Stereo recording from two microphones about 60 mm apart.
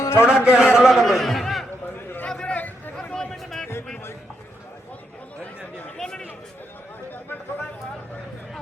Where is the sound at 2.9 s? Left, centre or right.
Centre.